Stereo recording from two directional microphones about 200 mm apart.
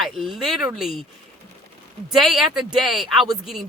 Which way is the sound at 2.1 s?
Centre (ahead or behind).